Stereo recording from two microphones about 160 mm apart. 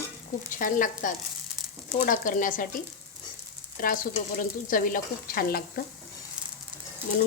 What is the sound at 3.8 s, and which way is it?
Speech, 60° left (ahead or behind).